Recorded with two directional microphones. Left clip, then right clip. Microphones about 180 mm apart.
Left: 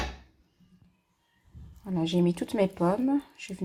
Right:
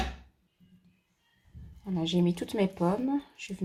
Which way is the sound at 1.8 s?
20° left (ahead or behind).